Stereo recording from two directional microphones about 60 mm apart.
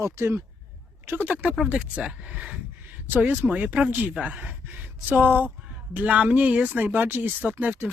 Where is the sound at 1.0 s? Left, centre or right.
Right.